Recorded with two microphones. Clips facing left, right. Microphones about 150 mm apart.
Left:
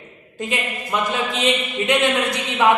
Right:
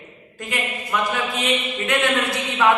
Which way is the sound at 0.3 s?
20° left (ahead or behind).